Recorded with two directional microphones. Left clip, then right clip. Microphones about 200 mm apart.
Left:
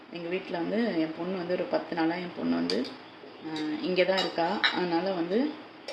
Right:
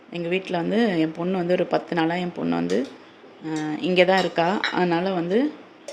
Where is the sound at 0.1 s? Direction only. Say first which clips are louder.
Right 8 dB; 55° right (ahead or behind).